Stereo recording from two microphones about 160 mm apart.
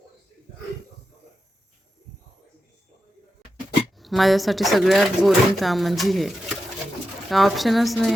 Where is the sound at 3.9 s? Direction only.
Centre (ahead or behind).